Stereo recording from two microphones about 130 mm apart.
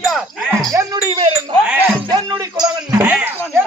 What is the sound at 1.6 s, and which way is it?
Music, 15° right (ahead or behind).